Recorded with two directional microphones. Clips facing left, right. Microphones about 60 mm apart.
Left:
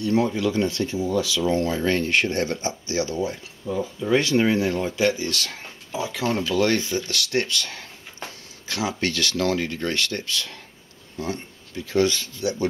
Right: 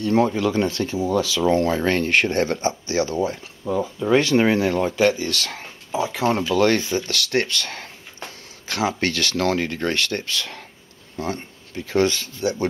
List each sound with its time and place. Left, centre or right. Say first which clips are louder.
0.0 s speech: right 3 dB; right
4.4 s speech: right 3 dB; right
5.9 s speech: right 4 dB; right
6.5 s speech: right 2 dB; right